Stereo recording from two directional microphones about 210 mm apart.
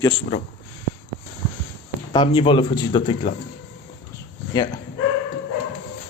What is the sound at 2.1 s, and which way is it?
Speech, 25° left (ahead or behind).